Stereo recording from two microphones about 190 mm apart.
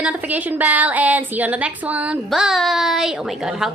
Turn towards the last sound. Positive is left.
turn(degrees=0)  # may be behind; listen again after turning